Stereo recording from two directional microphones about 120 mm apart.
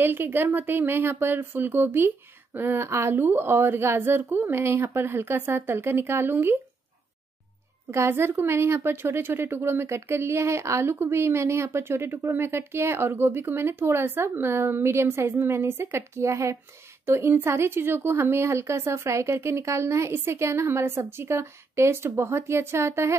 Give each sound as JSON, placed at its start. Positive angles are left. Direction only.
{"t": 0.0, "sound": "a woman's voice", "side_deg": -20}
{"t": 7.9, "sound": "a woman's voice", "side_deg": -20}